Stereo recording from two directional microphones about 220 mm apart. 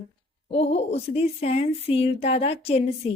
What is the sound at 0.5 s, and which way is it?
Speech, 30° left (ahead or behind).